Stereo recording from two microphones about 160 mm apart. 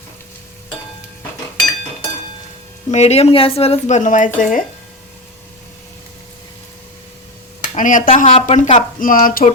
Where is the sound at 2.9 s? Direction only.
45° left (ahead or behind).